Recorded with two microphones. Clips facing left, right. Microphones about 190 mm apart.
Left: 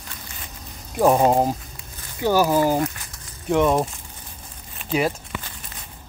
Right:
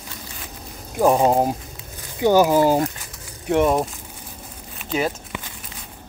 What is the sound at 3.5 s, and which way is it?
Speech, 5° right (ahead or behind).